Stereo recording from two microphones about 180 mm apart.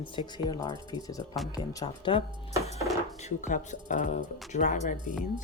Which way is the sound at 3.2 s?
40° left (ahead or behind).